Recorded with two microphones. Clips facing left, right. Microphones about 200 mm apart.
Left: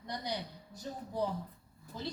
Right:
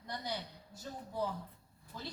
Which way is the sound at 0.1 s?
15° left (ahead or behind).